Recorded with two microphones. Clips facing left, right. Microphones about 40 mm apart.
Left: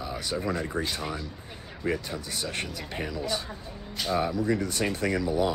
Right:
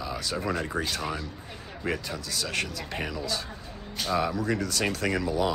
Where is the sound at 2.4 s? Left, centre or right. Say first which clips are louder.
Right 4 dB; right.